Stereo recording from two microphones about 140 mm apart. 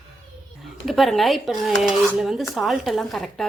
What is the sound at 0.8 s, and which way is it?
Speech, centre (ahead or behind).